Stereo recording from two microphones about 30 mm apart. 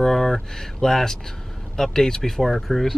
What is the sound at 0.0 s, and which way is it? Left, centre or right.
Speech, centre.